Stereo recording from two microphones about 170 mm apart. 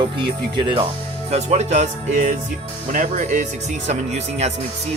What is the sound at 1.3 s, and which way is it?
Speech, 40° right (ahead or behind).